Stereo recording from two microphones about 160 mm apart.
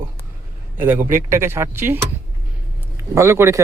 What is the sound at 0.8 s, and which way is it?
Speech, 10° right (ahead or behind).